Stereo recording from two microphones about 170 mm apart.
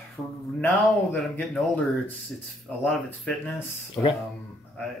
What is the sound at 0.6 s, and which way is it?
Speech, 10° left (ahead or behind).